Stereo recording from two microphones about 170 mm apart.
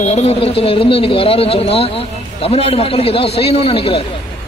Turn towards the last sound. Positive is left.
turn(degrees=35)  # may be behind; listen again after turning